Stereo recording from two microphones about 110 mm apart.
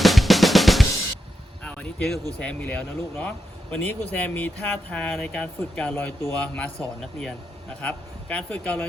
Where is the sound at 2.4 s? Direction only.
10° left (ahead or behind).